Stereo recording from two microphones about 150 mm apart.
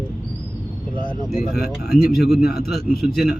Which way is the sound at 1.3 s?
Centre (ahead or behind).